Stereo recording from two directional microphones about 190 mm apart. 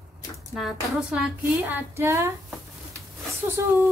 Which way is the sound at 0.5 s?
5° right (ahead or behind).